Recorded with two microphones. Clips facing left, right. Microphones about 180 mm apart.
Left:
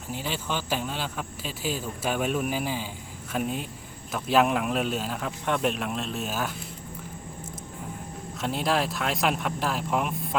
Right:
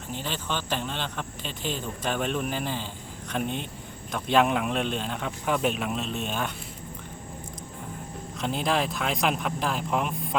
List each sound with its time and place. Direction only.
0.1 s speech: 10° left (ahead or behind)
8.4 s speech: centre (ahead or behind)